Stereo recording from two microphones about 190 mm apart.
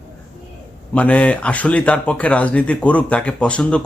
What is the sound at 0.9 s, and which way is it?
Speech, 5° left (ahead or behind).